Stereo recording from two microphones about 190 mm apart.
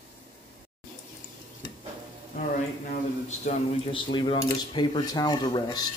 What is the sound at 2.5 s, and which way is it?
Speech, 40° left (ahead or behind).